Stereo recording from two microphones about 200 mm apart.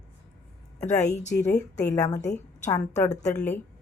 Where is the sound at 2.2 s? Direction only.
35° left (ahead or behind).